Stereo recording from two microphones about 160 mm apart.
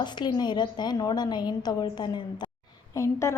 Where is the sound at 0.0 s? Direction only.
30° left (ahead or behind).